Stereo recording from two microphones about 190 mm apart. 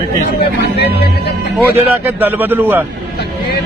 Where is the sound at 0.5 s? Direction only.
60° left (ahead or behind).